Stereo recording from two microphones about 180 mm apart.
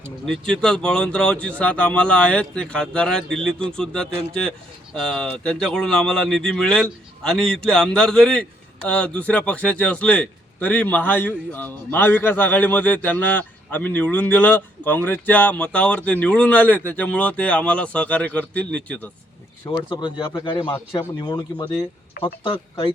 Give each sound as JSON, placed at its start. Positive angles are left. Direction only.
{"t": 0.3, "sound": "a man's voice", "side_deg": 5}
{"t": 19.6, "sound": "speech", "side_deg": 25}
{"t": 22.2, "sound": "speech", "side_deg": 55}